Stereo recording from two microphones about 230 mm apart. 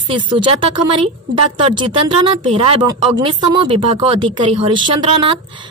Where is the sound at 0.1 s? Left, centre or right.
Right.